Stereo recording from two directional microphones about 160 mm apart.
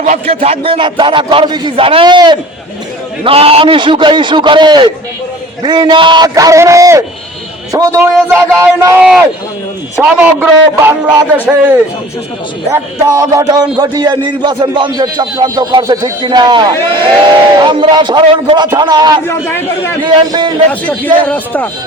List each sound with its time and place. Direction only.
0.0 s a man's voice: 45° right (ahead or behind); by 8.0 s 20° right (ahead or behind)
8.1 s speech: 5° right (ahead or behind)
12.7 s a man's voice: 20° right (ahead or behind)
19.3 s a man's voice: 15° left (ahead or behind)
20.0 s a man's voice: 30° right (ahead or behind)
20.7 s a man's voice: 10° left (ahead or behind)